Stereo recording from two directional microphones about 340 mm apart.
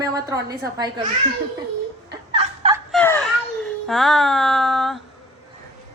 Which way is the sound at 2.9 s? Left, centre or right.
Centre.